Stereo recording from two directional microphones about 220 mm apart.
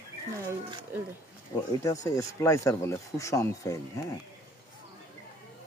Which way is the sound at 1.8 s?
15° left (ahead or behind).